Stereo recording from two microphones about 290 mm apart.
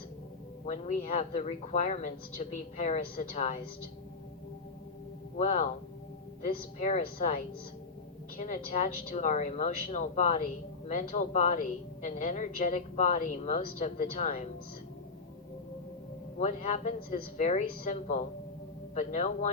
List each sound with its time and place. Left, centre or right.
0.6 s speech: left
5.4 s speech: left
8.4 s speech: left
16.4 s speech: left